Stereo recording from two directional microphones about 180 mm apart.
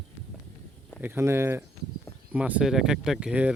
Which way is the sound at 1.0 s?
15° right (ahead or behind).